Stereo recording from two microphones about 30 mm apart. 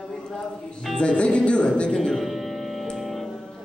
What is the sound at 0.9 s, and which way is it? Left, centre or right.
Music, left.